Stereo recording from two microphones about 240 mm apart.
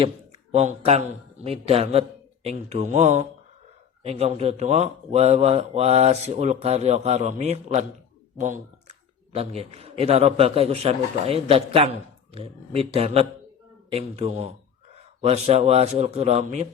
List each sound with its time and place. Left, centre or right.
0.5 s a man's voice: right